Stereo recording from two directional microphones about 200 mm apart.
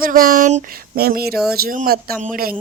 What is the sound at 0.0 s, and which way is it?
Speech, 45° right (ahead or behind).